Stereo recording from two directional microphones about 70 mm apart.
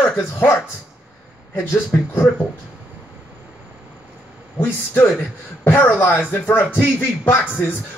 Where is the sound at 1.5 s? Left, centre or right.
Left.